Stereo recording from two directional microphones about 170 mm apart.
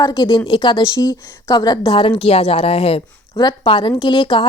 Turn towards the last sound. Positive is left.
turn(degrees=30)  # may be behind; listen again after turning